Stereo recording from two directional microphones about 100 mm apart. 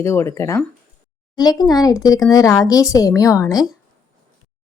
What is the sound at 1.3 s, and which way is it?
Speech, 40° left (ahead or behind).